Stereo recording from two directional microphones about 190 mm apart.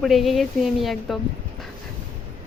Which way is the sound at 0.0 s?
Centre (ahead or behind).